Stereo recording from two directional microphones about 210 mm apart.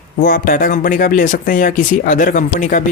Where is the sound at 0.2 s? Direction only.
40° left (ahead or behind).